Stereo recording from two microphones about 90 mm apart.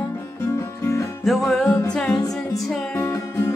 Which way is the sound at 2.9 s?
30° left (ahead or behind).